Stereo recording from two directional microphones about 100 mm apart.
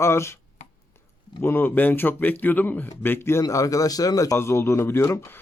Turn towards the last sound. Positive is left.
turn(degrees=25)  # may be behind; listen again after turning